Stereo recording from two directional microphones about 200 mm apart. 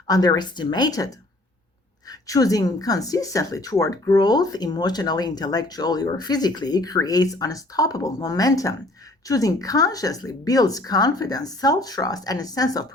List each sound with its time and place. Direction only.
0.1 s speech: 20° left (ahead or behind)